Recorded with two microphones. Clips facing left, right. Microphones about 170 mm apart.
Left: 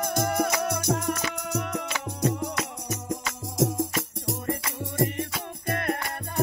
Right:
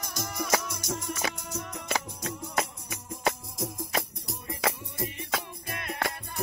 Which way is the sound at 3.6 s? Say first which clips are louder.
Left 7 dB; 85° left.